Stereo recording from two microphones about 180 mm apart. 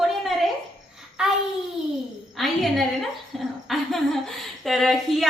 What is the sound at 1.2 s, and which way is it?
Speech, 5° right (ahead or behind).